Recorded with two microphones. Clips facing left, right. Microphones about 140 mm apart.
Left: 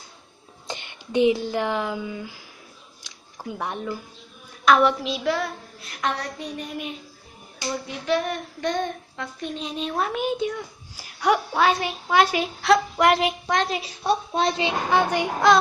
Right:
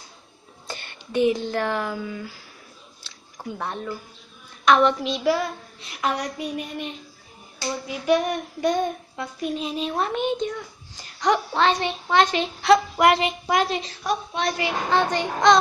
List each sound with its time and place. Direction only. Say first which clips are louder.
0.7 s speech: left 2 dB; 20° left (ahead or behind)
3.0 s a sound: even; 10° left (ahead or behind)
4.6 s child singing: even; 5° left (ahead or behind)
11.0 s a woman's voice: even; 5° left (ahead or behind)
13.0 s child singing: right 1 dB; centre (ahead or behind)
14.0 s speech: left 4 dB; 30° left (ahead or behind)
14.9 s a woman's voice: even; 10° left (ahead or behind)